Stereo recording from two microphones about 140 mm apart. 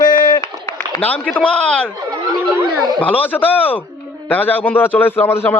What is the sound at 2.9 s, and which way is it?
Speech, 10° left (ahead or behind).